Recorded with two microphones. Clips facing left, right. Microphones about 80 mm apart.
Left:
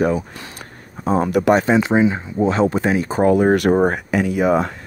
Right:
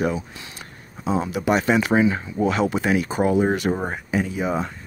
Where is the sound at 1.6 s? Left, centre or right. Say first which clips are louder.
Left 3 dB; left.